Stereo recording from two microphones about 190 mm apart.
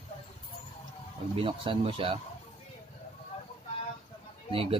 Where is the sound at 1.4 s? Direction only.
30° right (ahead or behind).